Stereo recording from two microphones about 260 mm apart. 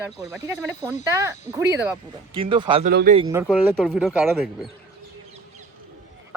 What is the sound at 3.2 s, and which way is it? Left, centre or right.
Speech, centre.